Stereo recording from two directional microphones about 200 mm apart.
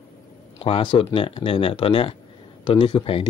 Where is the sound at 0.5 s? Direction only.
30° left (ahead or behind).